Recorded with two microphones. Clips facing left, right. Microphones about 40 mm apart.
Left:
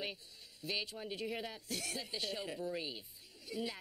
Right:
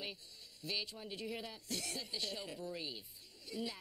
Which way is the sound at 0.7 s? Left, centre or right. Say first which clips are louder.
Left 2 dB; centre.